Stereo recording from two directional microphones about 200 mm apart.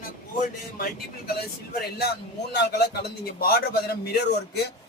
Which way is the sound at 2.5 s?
55° left (ahead or behind).